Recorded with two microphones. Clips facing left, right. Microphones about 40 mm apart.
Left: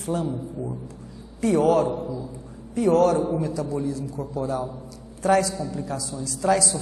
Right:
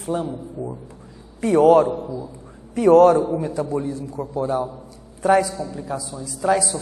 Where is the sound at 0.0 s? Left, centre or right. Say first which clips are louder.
Right 2 dB; right.